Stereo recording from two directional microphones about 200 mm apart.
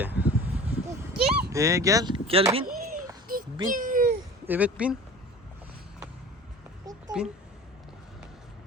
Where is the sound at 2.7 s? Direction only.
45° right (ahead or behind).